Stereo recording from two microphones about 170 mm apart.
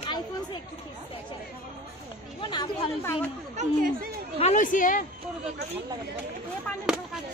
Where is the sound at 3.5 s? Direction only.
55° right (ahead or behind).